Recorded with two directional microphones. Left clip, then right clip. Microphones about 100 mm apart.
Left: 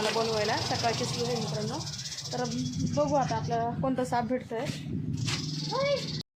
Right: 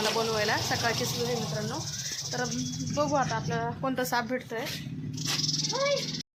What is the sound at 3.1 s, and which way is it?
Speech, 15° left (ahead or behind).